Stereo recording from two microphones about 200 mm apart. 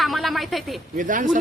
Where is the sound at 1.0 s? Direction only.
40° right (ahead or behind).